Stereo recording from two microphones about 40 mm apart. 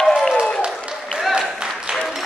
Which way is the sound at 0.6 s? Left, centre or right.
Right.